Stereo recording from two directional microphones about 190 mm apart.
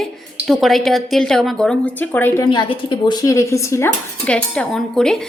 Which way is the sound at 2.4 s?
25° left (ahead or behind).